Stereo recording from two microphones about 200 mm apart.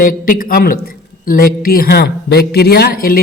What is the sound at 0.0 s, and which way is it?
A woman's voice, 45° left (ahead or behind).